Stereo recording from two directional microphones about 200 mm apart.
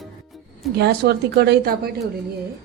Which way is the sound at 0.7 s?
55° right (ahead or behind).